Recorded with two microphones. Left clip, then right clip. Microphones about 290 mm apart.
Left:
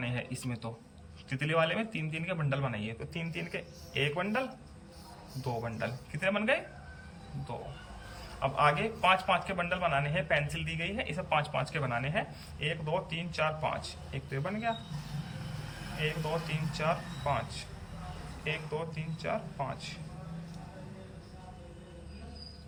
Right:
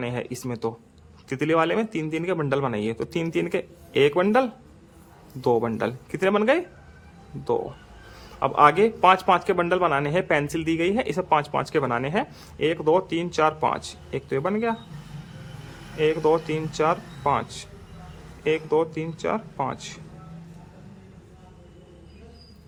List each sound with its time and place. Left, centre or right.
0.0 s a man's voice: centre
5.6 s a man's voice: centre
8.4 s a man's voice: centre
16.0 s speech: centre
18.4 s speech: centre